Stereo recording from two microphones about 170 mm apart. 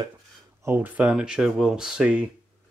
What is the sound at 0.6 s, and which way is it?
Speech, 10° right (ahead or behind).